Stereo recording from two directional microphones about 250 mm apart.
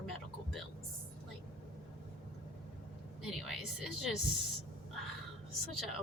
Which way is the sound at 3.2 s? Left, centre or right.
Centre.